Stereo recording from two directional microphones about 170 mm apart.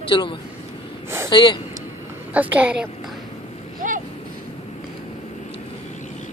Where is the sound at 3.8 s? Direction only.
50° right (ahead or behind).